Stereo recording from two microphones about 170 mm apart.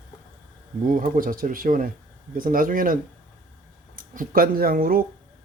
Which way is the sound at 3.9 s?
55° right (ahead or behind).